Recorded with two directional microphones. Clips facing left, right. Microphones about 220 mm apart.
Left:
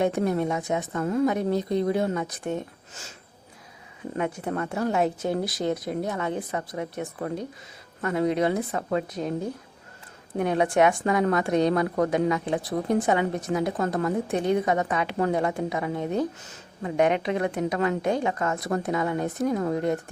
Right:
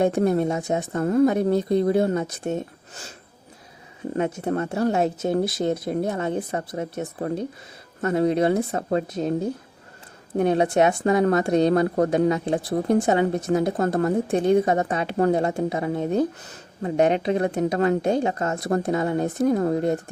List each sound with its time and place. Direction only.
0.0 s speech: 40° right (ahead or behind); by 2.6 s 25° right (ahead or behind)
4.5 s a woman's voice: 30° right (ahead or behind)
13.5 s a woman's voice: 40° right (ahead or behind)